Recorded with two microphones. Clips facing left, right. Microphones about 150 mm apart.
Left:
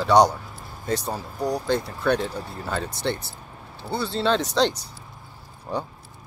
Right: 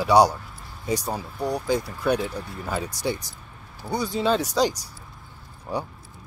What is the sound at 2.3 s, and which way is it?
Speech, 35° left (ahead or behind).